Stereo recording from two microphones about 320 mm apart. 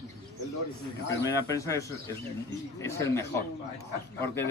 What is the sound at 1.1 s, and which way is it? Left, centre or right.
A man's voice, centre.